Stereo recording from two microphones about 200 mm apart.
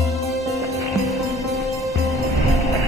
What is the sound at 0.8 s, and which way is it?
Music, centre (ahead or behind).